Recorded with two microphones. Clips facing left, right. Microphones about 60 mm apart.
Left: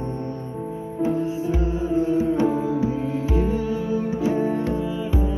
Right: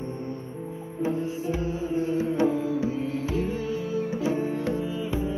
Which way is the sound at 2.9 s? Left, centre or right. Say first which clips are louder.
Left 4 dB; centre.